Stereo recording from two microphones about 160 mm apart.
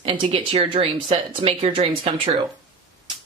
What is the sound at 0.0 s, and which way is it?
Speech, 35° right (ahead or behind).